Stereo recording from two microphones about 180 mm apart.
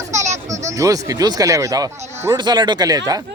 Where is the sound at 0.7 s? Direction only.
20° right (ahead or behind).